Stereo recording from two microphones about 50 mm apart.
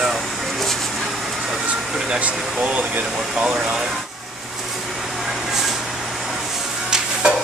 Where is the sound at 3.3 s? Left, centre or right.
Centre.